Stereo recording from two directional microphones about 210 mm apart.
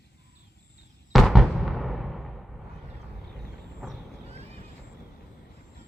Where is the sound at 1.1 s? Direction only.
Centre (ahead or behind).